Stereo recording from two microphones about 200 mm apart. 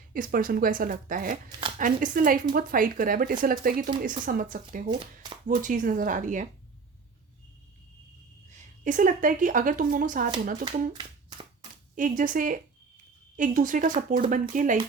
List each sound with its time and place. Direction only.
0.1 s speech: 45° right (ahead or behind)
4.9 s speech: 25° right (ahead or behind)
5.5 s speech: 40° right (ahead or behind)
8.4 s a woman's voice: 40° right (ahead or behind)
10.7 s a sound: 25° right (ahead or behind)
11.9 s speech: 40° right (ahead or behind)